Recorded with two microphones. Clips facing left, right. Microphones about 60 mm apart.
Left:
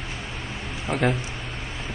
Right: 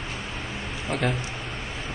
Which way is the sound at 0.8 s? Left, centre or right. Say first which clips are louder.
Left 3 dB; centre.